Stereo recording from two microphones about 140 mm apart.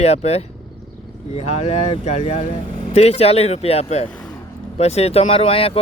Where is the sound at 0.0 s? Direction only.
50° left (ahead or behind).